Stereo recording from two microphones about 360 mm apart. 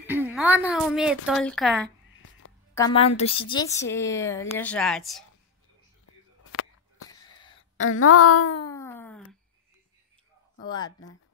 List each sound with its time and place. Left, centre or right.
0.0 s a woman's voice: centre
2.7 s a woman's voice: centre
6.0 s a sound: left
7.1 s a sound: centre
7.8 s a woman's voice: left
8.6 s wail: centre